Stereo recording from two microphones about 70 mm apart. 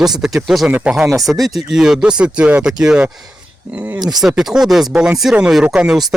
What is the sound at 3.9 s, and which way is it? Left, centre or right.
Speech, right.